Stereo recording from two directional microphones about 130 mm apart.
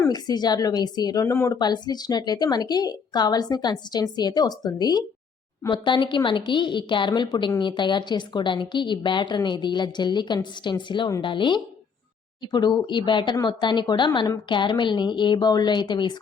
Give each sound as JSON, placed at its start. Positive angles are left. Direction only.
{"t": 0.1, "sound": "speech", "side_deg": 30}
{"t": 1.5, "sound": "speech", "side_deg": 35}